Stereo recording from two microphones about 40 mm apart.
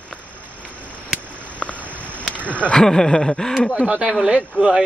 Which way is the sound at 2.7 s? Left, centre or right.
Centre.